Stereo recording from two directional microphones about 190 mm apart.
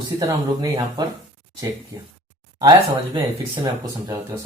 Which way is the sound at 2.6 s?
25° right (ahead or behind).